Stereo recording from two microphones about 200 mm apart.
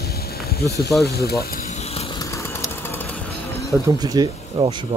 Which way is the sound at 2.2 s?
15° left (ahead or behind).